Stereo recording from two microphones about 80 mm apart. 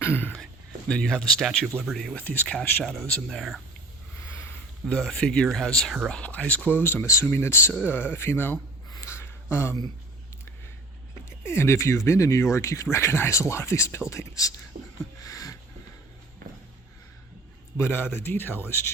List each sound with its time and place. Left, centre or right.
0.0 s speech: left
0.9 s speech: centre
2.1 s speech: left
2.8 s speech: centre
4.9 s speech: centre; by 8.5 s left
9.0 s a sound: left
11.3 s speech: left
15.2 s a sound: left
17.7 s speech: left